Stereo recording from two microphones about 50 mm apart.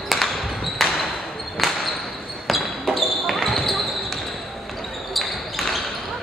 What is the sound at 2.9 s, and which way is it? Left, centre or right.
Basketball bounce, centre.